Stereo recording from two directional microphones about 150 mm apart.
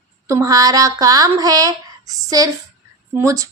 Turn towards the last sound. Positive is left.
turn(degrees=-20)  # may be behind; listen again after turning